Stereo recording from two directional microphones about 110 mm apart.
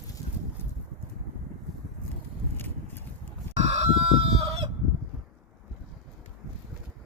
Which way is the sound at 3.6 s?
80° right.